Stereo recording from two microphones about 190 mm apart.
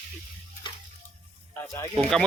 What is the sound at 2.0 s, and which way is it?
Speech, centre (ahead or behind).